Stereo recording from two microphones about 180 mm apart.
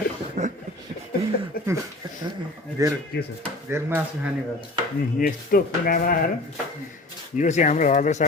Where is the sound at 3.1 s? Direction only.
65° left (ahead or behind).